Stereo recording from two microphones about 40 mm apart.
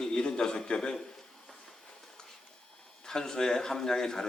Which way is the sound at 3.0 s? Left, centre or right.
Centre.